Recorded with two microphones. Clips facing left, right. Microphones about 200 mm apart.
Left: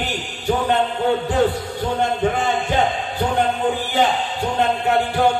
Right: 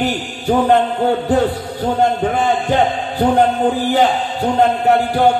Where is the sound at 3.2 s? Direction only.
40° right (ahead or behind).